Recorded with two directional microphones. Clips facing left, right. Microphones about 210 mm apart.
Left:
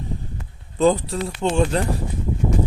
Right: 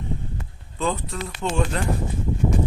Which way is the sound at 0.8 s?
35° left (ahead or behind).